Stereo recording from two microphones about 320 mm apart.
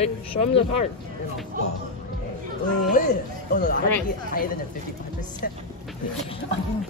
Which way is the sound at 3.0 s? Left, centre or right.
Left.